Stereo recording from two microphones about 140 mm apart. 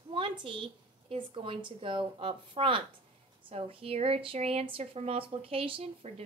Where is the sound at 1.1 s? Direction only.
40° right (ahead or behind).